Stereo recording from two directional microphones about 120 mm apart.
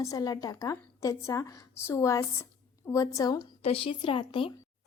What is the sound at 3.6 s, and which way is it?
Speech, 50° left (ahead or behind).